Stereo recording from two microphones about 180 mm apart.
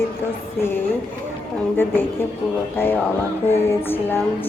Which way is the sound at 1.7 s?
10° left (ahead or behind).